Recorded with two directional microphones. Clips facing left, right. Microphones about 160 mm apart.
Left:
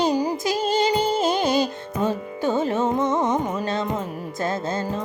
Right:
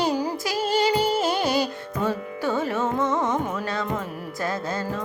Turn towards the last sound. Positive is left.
turn(degrees=20)  # may be behind; listen again after turning